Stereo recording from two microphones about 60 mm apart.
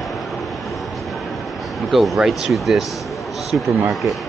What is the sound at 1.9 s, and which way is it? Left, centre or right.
Speech, centre.